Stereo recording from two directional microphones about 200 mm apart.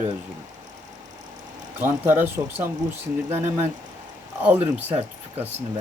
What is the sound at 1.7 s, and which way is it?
Speech, 10° right (ahead or behind).